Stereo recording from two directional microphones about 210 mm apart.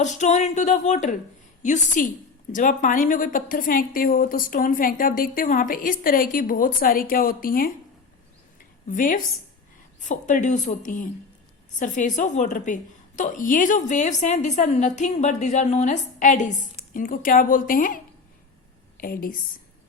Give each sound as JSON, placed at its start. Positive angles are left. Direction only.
{"t": 0.0, "sound": "a woman's voice", "side_deg": 35}
{"t": 8.9, "sound": "a woman's voice", "side_deg": 40}